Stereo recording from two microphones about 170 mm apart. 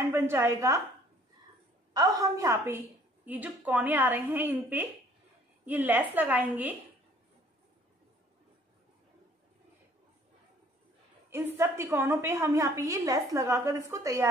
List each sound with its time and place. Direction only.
0.1 s a woman's voice: 15° right (ahead or behind)
2.0 s a woman's voice: 20° right (ahead or behind)
11.2 s a woman's voice: 15° right (ahead or behind)